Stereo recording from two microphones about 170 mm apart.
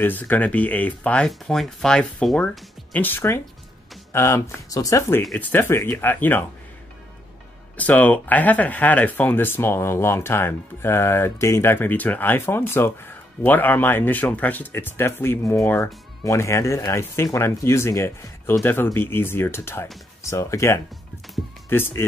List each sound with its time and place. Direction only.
0.0 s speech: 10° left (ahead or behind)
7.7 s speech: 10° left (ahead or behind)